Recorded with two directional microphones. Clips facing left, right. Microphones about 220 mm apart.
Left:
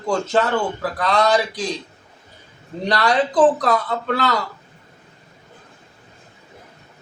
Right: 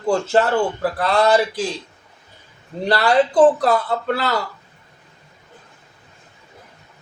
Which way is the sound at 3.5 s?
30° right (ahead or behind).